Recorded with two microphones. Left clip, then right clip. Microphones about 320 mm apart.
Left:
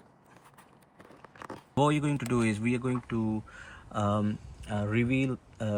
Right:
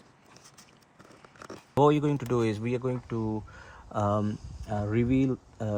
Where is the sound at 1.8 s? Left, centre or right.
Right.